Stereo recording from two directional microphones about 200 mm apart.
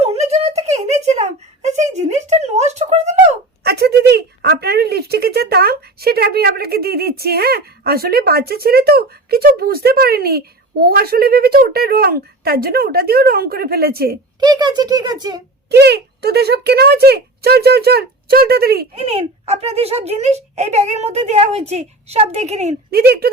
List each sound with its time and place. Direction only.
0.0 s a sound: 35° right (ahead or behind)
3.6 s speech: 55° right (ahead or behind)
14.3 s speech: 20° right (ahead or behind)
15.7 s speech: 55° right (ahead or behind)
18.9 s speech: 30° right (ahead or behind)
22.9 s speech: 50° right (ahead or behind)